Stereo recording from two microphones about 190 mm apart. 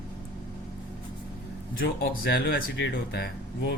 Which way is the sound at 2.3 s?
65° left (ahead or behind).